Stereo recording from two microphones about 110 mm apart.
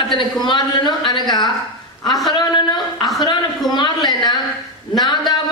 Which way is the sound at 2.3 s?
40° left (ahead or behind).